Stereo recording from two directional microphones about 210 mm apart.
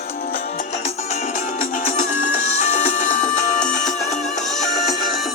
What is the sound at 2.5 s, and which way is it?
Music, 35° left (ahead or behind).